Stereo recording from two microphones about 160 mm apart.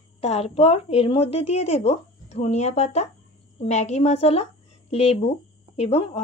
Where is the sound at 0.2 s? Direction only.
40° left (ahead or behind).